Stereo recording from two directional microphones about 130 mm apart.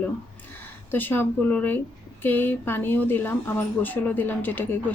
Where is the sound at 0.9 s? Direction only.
15° left (ahead or behind).